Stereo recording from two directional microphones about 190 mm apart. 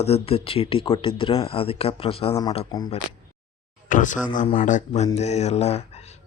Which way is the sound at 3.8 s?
40° left (ahead or behind).